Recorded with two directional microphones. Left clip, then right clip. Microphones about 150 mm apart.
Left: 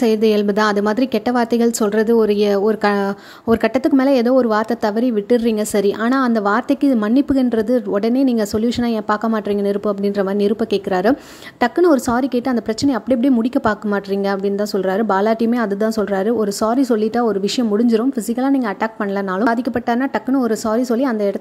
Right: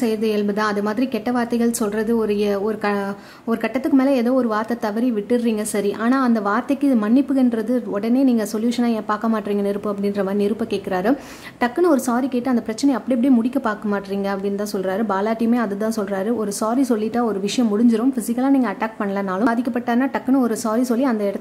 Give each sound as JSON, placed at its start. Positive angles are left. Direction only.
{"t": 0.0, "sound": "a woman's voice", "side_deg": 45}